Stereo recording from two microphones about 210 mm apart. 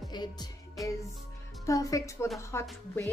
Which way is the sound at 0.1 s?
20° left (ahead or behind).